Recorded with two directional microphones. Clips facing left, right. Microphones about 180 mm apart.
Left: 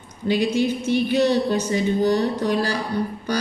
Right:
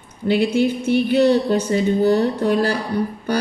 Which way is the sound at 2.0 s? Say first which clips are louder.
Right 3 dB; 55° right (ahead or behind).